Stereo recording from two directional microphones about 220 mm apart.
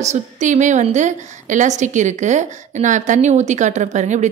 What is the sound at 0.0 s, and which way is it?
A woman's voice, 30° right (ahead or behind).